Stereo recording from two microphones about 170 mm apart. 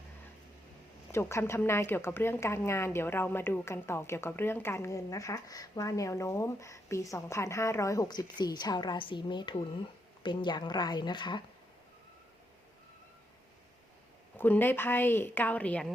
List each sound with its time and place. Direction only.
1.1 s a woman's voice: 15° left (ahead or behind)
14.3 s a woman's voice: 10° left (ahead or behind)